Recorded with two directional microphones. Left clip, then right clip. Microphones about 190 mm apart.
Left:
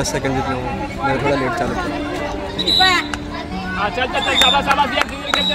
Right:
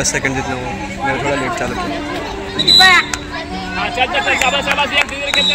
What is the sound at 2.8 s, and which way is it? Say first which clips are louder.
Speech: right 6 dB; 15° left (ahead or behind).